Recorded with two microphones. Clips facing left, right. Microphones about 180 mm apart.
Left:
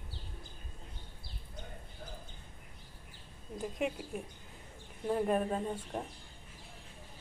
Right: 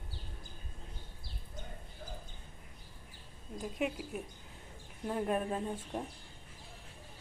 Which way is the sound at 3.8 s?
Centre (ahead or behind).